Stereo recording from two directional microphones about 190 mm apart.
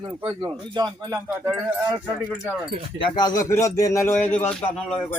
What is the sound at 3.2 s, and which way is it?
Speech, 20° left (ahead or behind).